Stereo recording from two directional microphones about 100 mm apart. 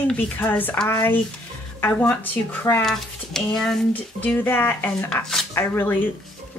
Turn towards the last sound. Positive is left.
turn(degrees=20)  # may be behind; listen again after turning